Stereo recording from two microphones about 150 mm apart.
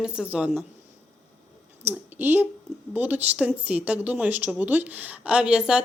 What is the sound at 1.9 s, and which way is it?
Speech, 10° right (ahead or behind).